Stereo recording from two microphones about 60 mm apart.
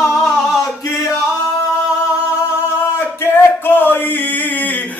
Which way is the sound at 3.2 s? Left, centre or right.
Left.